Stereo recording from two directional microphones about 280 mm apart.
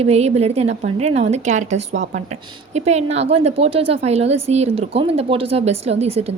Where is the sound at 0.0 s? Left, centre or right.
Right.